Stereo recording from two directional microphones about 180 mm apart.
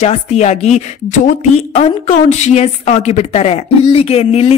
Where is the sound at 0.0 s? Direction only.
35° left (ahead or behind).